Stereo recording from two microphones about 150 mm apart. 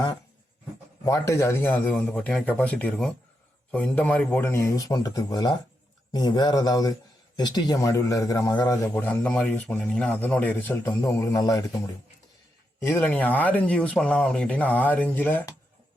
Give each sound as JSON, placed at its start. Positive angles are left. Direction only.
{"t": 1.0, "sound": "a man's voice", "side_deg": 20}
{"t": 8.9, "sound": "a man's voice", "side_deg": 10}
{"t": 12.8, "sound": "speech", "side_deg": 15}